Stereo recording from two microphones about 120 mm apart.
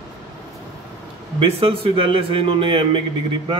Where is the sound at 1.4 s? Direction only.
55° right (ahead or behind).